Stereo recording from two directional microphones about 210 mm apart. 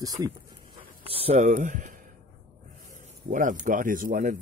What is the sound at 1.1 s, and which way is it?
Speech, 30° right (ahead or behind).